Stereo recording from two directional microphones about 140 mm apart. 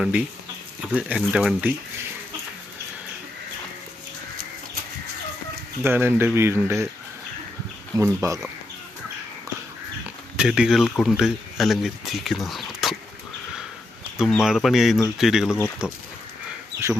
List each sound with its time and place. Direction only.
0.0 s speech: 10° right (ahead or behind)
5.8 s speech: 15° right (ahead or behind)
7.9 s speech: 20° right (ahead or behind)
10.3 s speech: 5° right (ahead or behind)
14.2 s speech: centre (ahead or behind)